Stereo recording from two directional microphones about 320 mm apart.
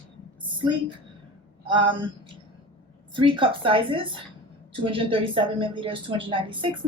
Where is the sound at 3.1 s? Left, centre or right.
Centre.